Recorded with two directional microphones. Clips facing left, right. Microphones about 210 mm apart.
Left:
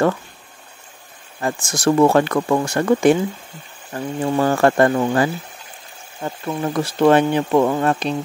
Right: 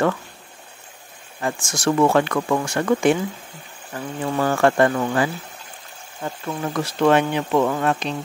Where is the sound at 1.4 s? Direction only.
35° left (ahead or behind).